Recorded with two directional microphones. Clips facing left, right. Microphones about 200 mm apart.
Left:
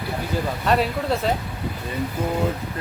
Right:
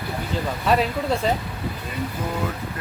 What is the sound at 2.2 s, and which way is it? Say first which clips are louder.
Speech: left 5 dB; 25° left (ahead or behind).